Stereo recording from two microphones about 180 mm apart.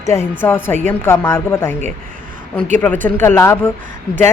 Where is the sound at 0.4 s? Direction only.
10° left (ahead or behind).